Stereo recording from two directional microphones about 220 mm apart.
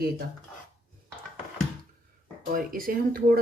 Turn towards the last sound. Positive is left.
turn(degrees=-40)  # may be behind; listen again after turning